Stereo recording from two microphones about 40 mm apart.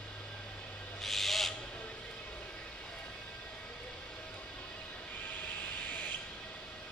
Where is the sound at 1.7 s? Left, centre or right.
Left.